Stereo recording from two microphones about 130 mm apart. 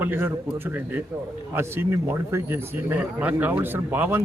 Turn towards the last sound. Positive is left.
turn(degrees=-15)  # may be behind; listen again after turning